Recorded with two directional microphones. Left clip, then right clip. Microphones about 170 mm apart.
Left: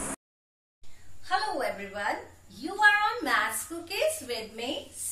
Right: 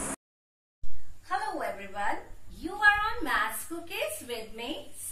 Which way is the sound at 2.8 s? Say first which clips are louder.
Left 2 dB; 15° left (ahead or behind).